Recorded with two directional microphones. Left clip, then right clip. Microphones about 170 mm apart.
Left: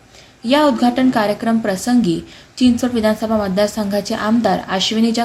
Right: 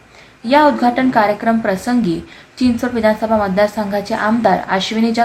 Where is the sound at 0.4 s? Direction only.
20° left (ahead or behind).